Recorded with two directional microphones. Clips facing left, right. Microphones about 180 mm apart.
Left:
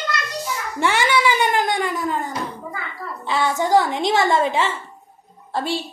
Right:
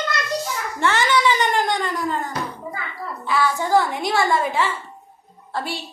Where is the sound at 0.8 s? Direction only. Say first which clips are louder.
Even; 10° left (ahead or behind).